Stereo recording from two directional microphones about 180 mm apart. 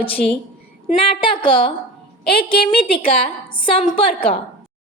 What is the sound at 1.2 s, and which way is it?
Speech, 25° left (ahead or behind).